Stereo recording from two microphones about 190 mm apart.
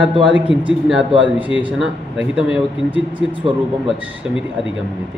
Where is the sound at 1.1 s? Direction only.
25° right (ahead or behind).